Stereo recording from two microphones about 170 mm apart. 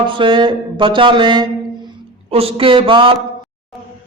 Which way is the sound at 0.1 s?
30° right (ahead or behind).